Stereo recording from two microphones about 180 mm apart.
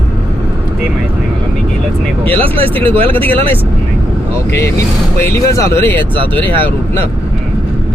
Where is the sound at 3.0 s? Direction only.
30° right (ahead or behind).